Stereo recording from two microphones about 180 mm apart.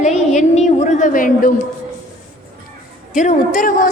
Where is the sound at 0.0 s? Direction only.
40° left (ahead or behind).